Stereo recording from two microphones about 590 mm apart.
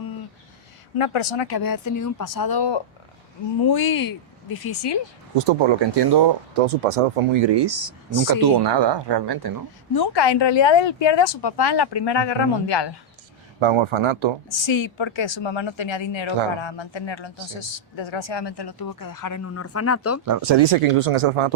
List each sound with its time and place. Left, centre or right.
0.9 s speech: left
5.3 s speech: right
6.6 s speech: right
7.3 s speech: right
9.9 s speech: left
13.6 s speech: right
14.5 s speech: left
20.2 s speech: right
20.6 s speech: right